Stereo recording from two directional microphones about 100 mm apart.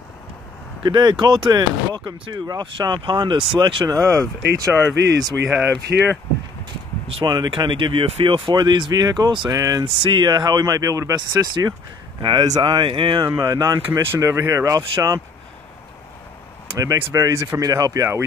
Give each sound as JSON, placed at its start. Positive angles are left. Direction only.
{"t": 0.8, "sound": "speech", "side_deg": -45}
{"t": 4.0, "sound": "speech", "side_deg": -30}
{"t": 5.5, "sound": "speech", "side_deg": -15}
{"t": 7.2, "sound": "speech", "side_deg": -50}
{"t": 8.5, "sound": "speech", "side_deg": -50}
{"t": 9.8, "sound": "speech", "side_deg": -60}
{"t": 11.1, "sound": "speech", "side_deg": -45}
{"t": 13.3, "sound": "speech", "side_deg": -35}
{"t": 16.7, "sound": "speech", "side_deg": -30}